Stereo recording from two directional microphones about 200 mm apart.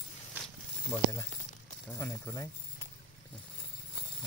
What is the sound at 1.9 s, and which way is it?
Speech, 10° left (ahead or behind).